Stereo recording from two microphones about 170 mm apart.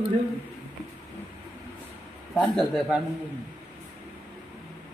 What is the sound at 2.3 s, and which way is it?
Speech, centre (ahead or behind).